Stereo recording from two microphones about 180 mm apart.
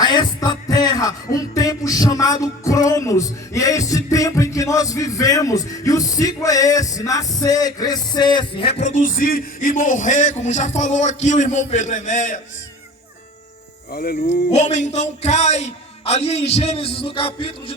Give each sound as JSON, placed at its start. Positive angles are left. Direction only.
{"t": 0.0, "sound": "music", "side_deg": 25}
{"t": 13.9, "sound": "speech", "side_deg": 60}
{"t": 14.3, "sound": "speech", "side_deg": 40}